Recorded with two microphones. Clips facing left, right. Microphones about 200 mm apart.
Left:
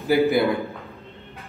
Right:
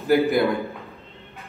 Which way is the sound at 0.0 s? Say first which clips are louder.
Even; centre (ahead or behind).